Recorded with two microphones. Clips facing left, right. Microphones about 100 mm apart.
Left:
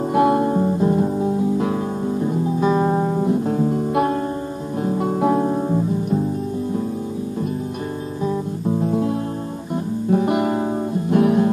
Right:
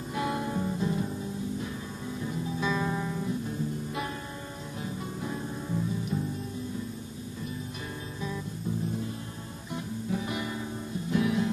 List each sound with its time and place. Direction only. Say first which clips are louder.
0.1 s music: left 14 dB; 55° left (ahead or behind); by 1.8 s 70° left (ahead or behind)
2.0 s music: left 11 dB; 45° left (ahead or behind)
3.4 s music: left 14 dB; 80° left; by 5.8 s 60° left (ahead or behind)
8.6 s music: left 13 dB; 75° left (ahead or behind)
10.1 s music: left 16 dB; 60° left (ahead or behind)